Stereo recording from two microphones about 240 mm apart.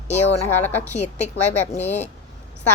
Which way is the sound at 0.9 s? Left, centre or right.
Left.